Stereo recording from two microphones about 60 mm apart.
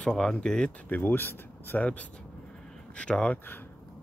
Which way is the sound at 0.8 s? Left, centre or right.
Left.